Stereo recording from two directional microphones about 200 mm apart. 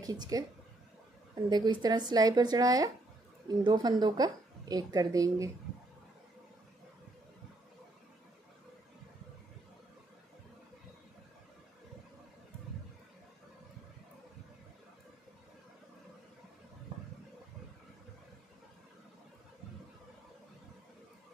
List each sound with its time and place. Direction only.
0.0 s a woman's voice: 20° right (ahead or behind)